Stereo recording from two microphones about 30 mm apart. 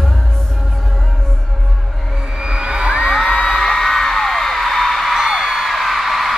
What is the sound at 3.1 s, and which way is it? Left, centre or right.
Music, centre.